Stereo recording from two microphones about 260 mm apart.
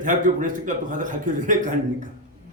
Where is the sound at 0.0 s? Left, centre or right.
Right.